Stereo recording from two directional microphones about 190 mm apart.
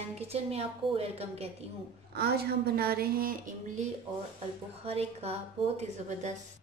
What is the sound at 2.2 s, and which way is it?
A woman's voice, 55° right (ahead or behind).